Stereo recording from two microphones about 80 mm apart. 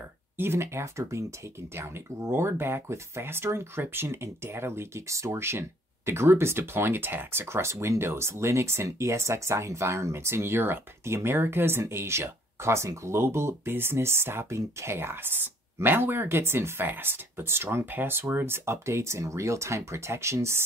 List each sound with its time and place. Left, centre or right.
0.4 s speech: right